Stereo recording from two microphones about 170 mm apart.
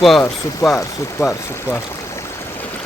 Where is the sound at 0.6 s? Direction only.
20° left (ahead or behind).